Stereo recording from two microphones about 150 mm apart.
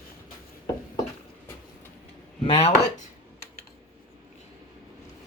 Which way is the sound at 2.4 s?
40° left (ahead or behind).